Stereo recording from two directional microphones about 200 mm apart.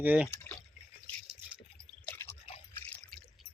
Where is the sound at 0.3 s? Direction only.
5° left (ahead or behind).